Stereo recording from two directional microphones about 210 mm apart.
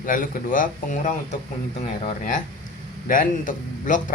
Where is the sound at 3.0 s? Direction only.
40° left (ahead or behind).